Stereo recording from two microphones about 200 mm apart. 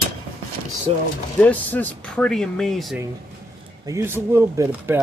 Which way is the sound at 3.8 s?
15° right (ahead or behind).